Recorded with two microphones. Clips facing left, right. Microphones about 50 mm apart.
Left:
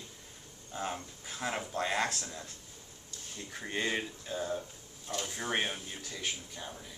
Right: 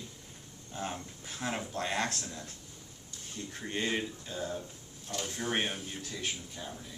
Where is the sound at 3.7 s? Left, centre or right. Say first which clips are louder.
Even; centre.